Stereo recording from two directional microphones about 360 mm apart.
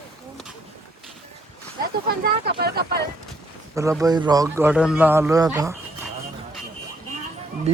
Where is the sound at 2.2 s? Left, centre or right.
Right.